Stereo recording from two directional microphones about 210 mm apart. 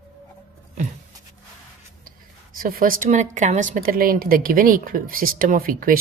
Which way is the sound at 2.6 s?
40° right (ahead or behind).